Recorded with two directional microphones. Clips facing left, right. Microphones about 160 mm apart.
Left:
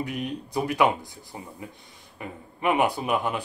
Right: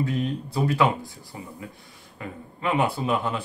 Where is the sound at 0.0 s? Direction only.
15° left (ahead or behind).